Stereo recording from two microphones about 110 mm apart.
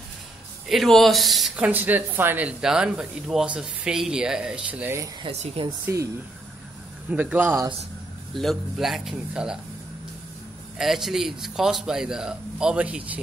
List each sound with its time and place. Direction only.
0.7 s a man's voice: centre (ahead or behind)
1.6 s speech: 15° right (ahead or behind)
5.6 s speech: 65° right (ahead or behind)
7.1 s speech: 15° right (ahead or behind)
8.4 s a man's voice: centre (ahead or behind)
10.8 s a man's voice: 5° right (ahead or behind)